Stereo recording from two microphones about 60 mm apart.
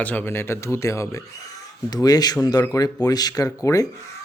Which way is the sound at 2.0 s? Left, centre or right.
Left.